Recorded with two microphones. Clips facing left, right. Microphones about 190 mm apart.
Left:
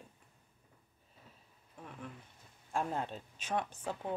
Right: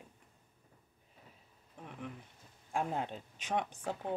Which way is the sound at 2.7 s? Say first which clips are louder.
Even; 15° right (ahead or behind).